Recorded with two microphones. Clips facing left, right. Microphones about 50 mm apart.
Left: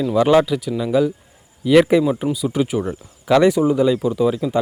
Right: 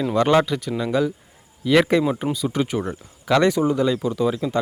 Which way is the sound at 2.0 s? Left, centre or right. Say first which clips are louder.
Left 3 dB; centre.